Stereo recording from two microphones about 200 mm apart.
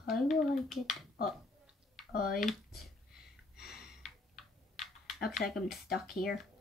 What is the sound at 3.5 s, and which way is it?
Gasp, 50° left (ahead or behind).